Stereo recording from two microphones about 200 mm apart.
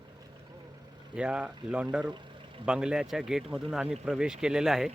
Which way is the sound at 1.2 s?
5° right (ahead or behind).